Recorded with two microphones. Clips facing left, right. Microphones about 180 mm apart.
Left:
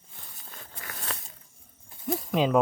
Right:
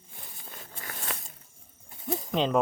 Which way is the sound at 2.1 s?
5° left (ahead or behind).